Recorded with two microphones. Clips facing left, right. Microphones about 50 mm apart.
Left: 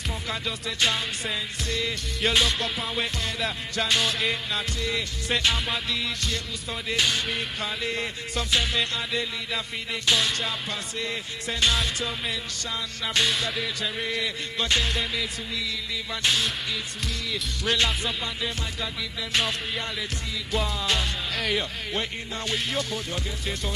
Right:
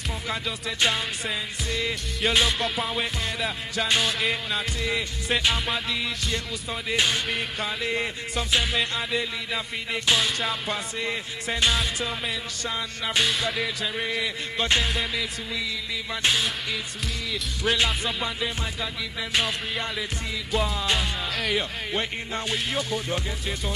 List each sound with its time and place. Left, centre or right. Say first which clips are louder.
0.3 s music: right 2 dB; centre
11.7 s music: right 1 dB; centre
12.6 s music: right 3 dB; centre
15.0 s music: right 1 dB; centre
19.3 s music: even; centre